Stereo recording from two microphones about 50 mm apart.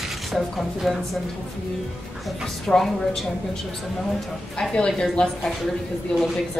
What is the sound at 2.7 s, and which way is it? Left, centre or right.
Speech, centre.